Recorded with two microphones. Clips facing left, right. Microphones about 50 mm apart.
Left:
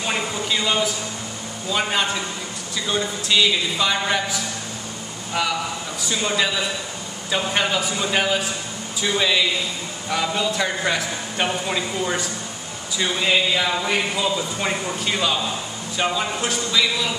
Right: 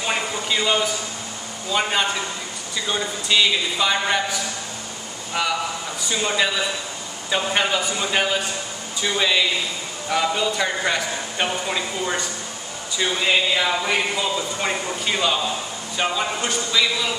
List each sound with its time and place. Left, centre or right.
0.0 s a sound: centre
1.7 s speech: centre
5.9 s speech: centre